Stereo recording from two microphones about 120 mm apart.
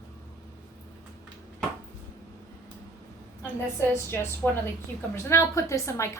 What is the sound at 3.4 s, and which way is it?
A woman's voice, 20° left (ahead or behind).